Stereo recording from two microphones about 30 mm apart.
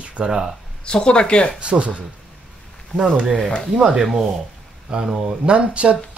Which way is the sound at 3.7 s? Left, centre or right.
Right.